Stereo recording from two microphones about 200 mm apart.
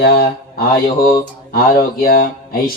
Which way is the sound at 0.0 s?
50° left (ahead or behind).